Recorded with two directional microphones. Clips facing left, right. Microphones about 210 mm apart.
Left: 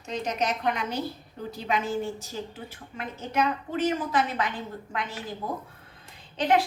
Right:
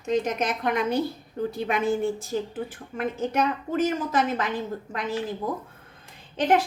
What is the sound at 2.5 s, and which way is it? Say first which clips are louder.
A woman's voice: right 8 dB; 50° right (ahead or behind).